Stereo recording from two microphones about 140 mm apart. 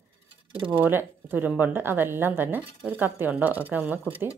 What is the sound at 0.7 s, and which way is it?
A woman's voice, 15° right (ahead or behind).